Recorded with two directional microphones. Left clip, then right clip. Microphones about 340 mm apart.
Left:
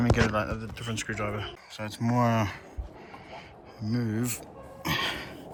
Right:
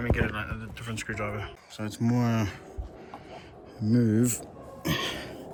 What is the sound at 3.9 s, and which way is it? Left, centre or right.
Speech, centre.